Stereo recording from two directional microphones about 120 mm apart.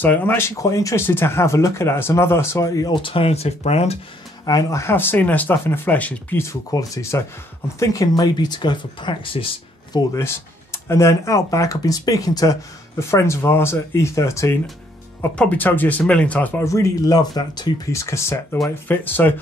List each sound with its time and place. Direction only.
0.0 s speech: 15° left (ahead or behind)
2.9 s speech: 45° left (ahead or behind)
4.5 s speech: 30° left (ahead or behind); by 10.0 s 45° left (ahead or behind)
10.1 s speech: 20° left (ahead or behind)
16.6 s speech: 25° left (ahead or behind)